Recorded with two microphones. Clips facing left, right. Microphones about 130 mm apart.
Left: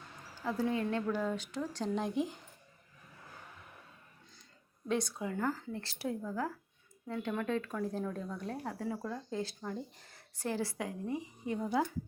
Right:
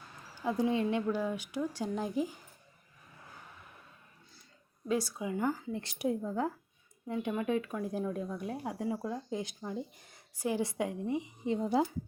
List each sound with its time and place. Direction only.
0.4 s speech: 15° right (ahead or behind)
4.9 s speech: 5° right (ahead or behind); by 11.9 s 25° right (ahead or behind)